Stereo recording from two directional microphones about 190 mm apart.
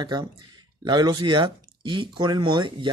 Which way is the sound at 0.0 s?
20° right (ahead or behind).